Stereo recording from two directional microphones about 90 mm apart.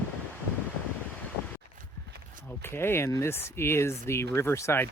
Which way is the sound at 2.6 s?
25° left (ahead or behind).